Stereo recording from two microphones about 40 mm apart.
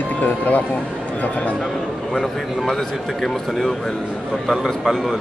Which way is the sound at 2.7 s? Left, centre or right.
Centre.